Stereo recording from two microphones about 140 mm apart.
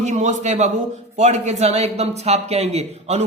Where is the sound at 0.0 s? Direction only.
55° right (ahead or behind).